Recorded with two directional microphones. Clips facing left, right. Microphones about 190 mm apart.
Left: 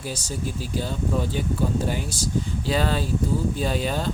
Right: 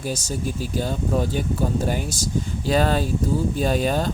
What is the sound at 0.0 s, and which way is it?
Speech, 45° right (ahead or behind).